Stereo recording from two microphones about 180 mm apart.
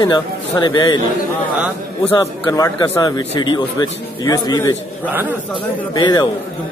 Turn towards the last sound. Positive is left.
turn(degrees=25)  # may be behind; listen again after turning